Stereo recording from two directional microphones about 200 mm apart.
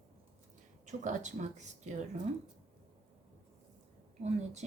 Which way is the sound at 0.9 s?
35° right (ahead or behind).